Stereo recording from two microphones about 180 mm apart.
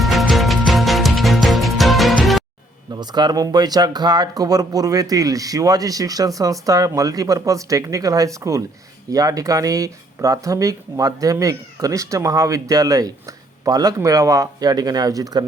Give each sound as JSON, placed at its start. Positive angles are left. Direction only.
{"t": 0.0, "sound": "music", "side_deg": 0}
{"t": 2.9, "sound": "speech", "side_deg": -25}